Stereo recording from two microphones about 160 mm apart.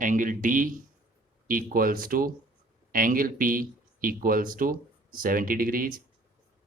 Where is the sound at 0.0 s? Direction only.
55° right (ahead or behind).